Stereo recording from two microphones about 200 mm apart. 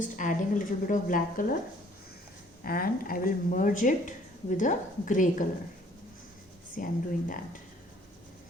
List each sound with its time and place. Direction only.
0.0 s speech: 40° left (ahead or behind)
2.6 s speech: 50° left (ahead or behind)
6.7 s speech: 45° left (ahead or behind)